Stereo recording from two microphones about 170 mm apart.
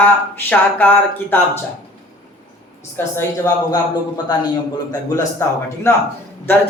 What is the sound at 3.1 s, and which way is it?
Speech, 20° left (ahead or behind).